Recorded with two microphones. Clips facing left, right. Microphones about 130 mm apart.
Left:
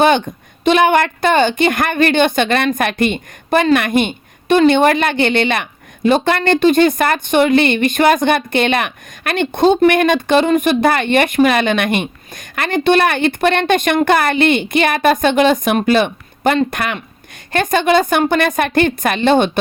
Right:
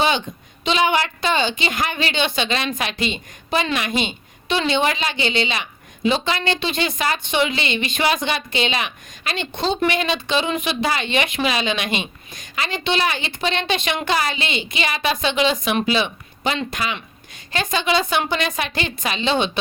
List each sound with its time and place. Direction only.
0.0 s a woman's voice: 55° left (ahead or behind)